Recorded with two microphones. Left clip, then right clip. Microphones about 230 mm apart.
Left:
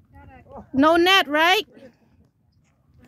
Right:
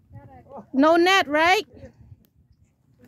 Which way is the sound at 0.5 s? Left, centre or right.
Centre.